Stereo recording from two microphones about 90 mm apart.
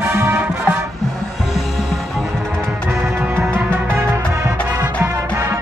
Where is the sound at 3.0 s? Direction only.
30° right (ahead or behind).